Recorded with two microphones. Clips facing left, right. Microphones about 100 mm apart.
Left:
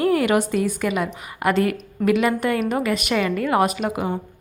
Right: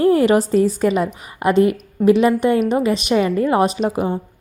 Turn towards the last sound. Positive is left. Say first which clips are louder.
# right 3 dB
turn(degrees=-25)  # may be behind; listen again after turning